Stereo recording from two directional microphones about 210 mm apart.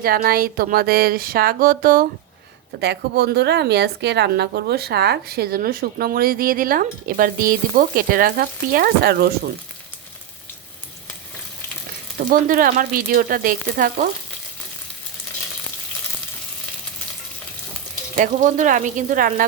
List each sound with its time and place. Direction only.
0.0 s a woman's voice: 45° right (ahead or behind)
12.3 s speech: 40° right (ahead or behind)
18.2 s speech: 35° right (ahead or behind)